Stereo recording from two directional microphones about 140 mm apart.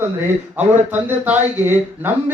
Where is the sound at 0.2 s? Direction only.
15° right (ahead or behind).